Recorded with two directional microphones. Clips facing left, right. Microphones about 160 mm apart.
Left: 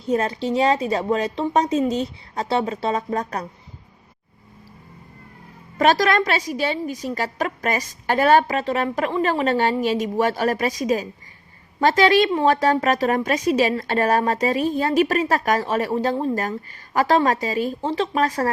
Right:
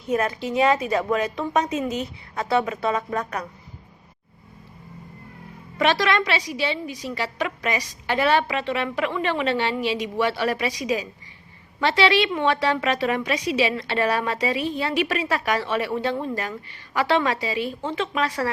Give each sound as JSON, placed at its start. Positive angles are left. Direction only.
{"t": 0.0, "sound": "a woman's voice", "side_deg": 30}
{"t": 5.7, "sound": "a woman's voice", "side_deg": 45}